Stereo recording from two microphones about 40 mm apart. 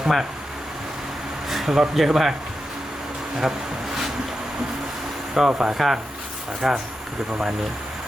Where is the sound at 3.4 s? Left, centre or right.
Centre.